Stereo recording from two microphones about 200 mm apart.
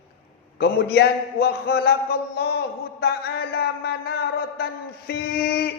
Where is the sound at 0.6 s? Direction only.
55° left (ahead or behind).